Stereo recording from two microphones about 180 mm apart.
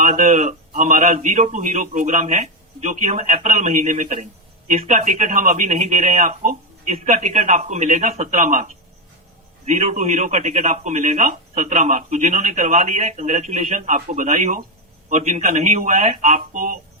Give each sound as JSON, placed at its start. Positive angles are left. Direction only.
{"t": 0.0, "sound": "a man's voice", "side_deg": -40}